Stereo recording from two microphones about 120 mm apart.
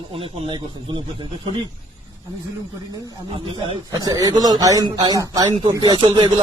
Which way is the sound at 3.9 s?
30° right (ahead or behind).